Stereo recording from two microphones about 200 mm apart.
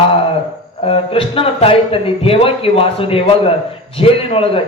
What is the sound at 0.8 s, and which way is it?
A man's voice, 25° left (ahead or behind).